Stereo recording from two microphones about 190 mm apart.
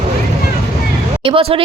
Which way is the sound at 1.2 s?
30° right (ahead or behind).